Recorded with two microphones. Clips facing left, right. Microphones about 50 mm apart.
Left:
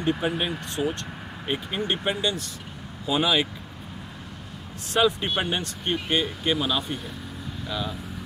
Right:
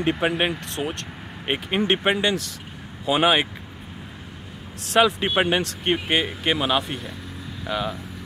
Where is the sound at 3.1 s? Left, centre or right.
Right.